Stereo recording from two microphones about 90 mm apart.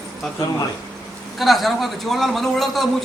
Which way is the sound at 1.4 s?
Centre (ahead or behind).